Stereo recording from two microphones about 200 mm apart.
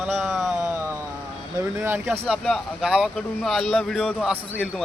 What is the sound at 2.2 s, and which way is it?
Speech, centre (ahead or behind).